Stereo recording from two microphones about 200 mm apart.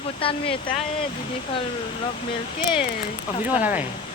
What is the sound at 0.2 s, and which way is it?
Speech, 25° left (ahead or behind).